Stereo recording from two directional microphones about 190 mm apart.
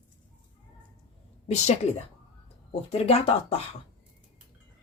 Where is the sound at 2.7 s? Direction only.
30° left (ahead or behind).